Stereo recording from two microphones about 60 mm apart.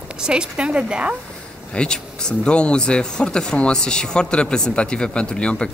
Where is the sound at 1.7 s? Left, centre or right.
Centre.